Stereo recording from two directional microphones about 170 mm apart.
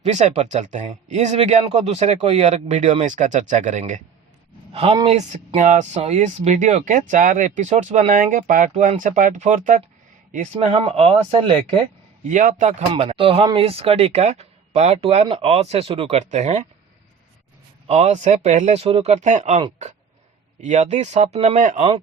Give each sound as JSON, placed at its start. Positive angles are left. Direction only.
{"t": 0.0, "sound": "speech", "side_deg": -40}
{"t": 4.7, "sound": "speech", "side_deg": -35}
{"t": 12.3, "sound": "speech", "side_deg": -50}
{"t": 12.9, "sound": "speech", "side_deg": -35}
{"t": 17.8, "sound": "speech", "side_deg": -40}